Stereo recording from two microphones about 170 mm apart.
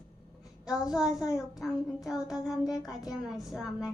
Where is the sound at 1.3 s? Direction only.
20° left (ahead or behind).